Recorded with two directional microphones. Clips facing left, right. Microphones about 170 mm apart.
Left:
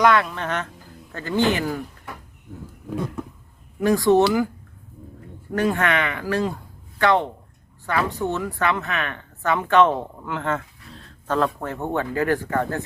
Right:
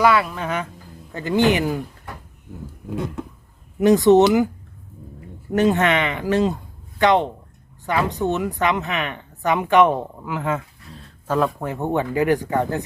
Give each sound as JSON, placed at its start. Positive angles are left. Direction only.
{"t": 0.0, "sound": "a woman's voice", "side_deg": -5}
{"t": 3.8, "sound": "speech", "side_deg": -20}
{"t": 5.5, "sound": "a woman's voice", "side_deg": -20}